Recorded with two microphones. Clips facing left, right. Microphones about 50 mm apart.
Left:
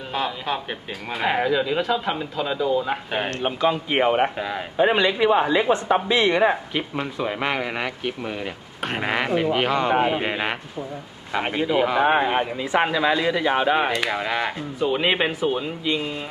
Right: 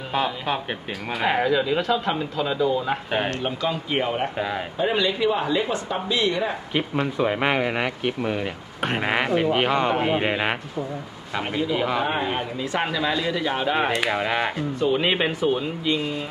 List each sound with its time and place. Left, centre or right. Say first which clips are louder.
0.1 s speech: right 1 dB; centre
3.4 s a man's voice: left 4 dB; left
4.4 s speech: right 1 dB; centre
4.8 s speech: left 4 dB; left
6.7 s speech: right 3 dB; centre
11.4 s a man's voice: even; left
11.7 s a man's voice: left 6 dB; centre
13.9 s speech: right 1 dB; centre
14.8 s a man's voice: left 1 dB; centre